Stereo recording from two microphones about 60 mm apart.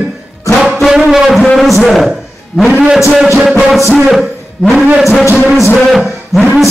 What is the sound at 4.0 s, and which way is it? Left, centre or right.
Speech, centre.